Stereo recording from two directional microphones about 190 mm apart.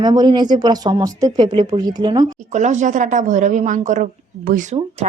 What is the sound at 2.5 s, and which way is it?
Speech, 40° right (ahead or behind).